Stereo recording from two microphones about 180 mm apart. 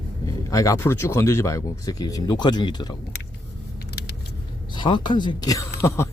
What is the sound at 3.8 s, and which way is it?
Vehicle, 60° left (ahead or behind).